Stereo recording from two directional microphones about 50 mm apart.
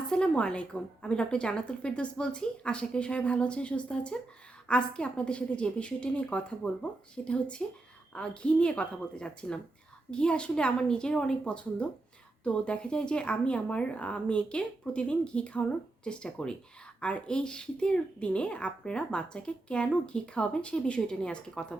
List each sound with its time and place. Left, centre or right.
0.1 s a woman's voice: centre